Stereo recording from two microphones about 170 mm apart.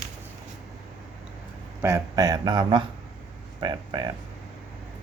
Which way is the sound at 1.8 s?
20° right (ahead or behind).